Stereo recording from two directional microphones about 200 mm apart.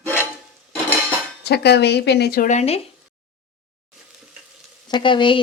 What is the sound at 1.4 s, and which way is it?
Speech, 55° left (ahead or behind).